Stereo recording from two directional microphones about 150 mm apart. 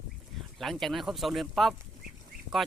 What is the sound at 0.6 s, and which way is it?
Speech, centre (ahead or behind).